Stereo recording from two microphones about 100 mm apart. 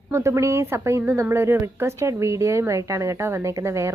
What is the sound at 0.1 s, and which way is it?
Speech, 30° right (ahead or behind).